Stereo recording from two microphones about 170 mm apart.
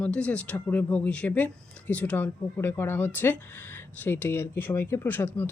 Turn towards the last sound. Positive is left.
turn(degrees=10)  # may be behind; listen again after turning